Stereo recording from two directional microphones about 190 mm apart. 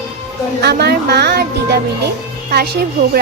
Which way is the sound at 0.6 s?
60° right (ahead or behind).